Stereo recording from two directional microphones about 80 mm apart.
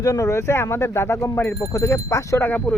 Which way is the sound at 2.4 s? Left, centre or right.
Centre.